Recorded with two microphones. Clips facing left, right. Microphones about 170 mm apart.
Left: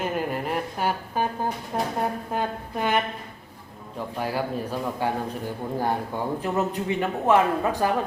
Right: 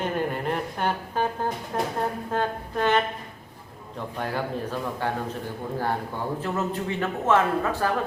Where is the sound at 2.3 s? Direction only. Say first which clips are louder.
Right 1 dB; 10° left (ahead or behind).